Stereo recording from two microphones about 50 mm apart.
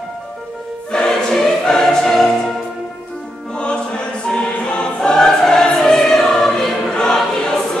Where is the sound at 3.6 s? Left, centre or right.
Centre.